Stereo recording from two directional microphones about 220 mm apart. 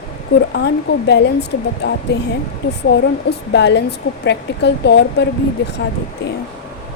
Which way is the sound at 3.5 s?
50° left (ahead or behind).